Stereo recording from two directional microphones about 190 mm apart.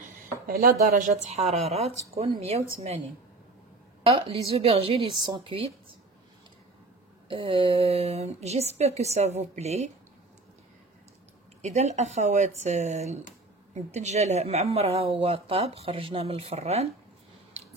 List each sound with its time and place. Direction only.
0.5 s speech: 50° right (ahead or behind)
4.0 s a woman's voice: 30° right (ahead or behind)
7.2 s speech: 25° right (ahead or behind)
11.6 s speech: 35° right (ahead or behind)